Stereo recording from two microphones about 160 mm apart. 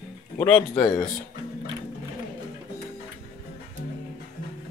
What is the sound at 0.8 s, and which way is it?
Speech, 25° left (ahead or behind).